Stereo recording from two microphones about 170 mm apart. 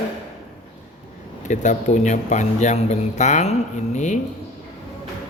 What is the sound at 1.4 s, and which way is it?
A man's voice, 45° left (ahead or behind).